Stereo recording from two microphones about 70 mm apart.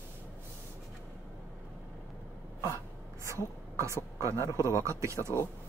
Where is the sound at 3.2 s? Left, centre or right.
Right.